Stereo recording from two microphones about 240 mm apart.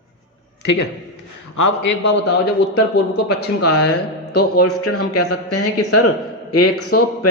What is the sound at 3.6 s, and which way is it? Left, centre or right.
Speech, left.